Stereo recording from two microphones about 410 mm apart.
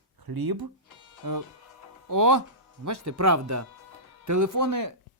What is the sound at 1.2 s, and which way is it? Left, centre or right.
Speech, right.